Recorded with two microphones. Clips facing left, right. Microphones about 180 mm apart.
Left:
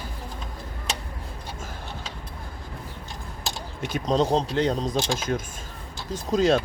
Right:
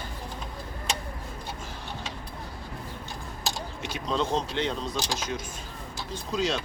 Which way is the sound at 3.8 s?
45° left (ahead or behind).